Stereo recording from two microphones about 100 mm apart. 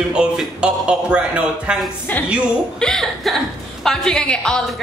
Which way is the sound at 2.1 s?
15° left (ahead or behind).